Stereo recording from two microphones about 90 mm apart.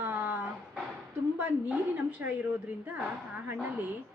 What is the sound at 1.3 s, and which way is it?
Speech, 20° right (ahead or behind).